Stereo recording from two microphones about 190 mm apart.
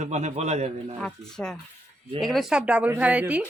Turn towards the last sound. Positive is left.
turn(degrees=-5)  # may be behind; listen again after turning